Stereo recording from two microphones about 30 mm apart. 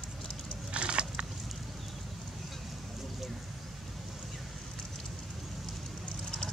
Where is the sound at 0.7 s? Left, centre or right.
Right.